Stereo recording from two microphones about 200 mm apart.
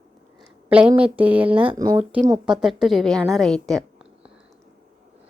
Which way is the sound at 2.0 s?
5° right (ahead or behind).